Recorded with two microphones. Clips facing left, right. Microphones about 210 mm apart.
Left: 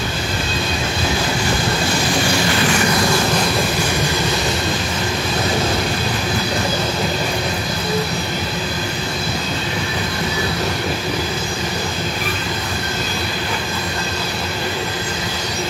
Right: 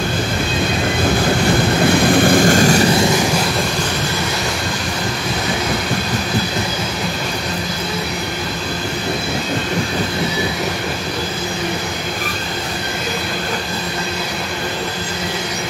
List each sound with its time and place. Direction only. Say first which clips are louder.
1.9 s vehicle: right 9 dB; 55° right (ahead or behind)